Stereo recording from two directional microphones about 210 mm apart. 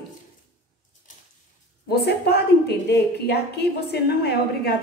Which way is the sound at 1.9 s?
50° left (ahead or behind).